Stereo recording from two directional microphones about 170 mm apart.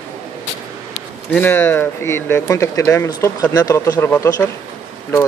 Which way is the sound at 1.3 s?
10° left (ahead or behind).